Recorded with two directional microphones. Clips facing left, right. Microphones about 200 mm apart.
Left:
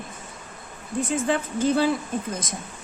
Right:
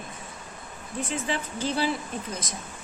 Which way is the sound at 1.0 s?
50° left (ahead or behind).